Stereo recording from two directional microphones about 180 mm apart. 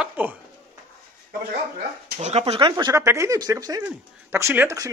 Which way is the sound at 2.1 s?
35° right (ahead or behind).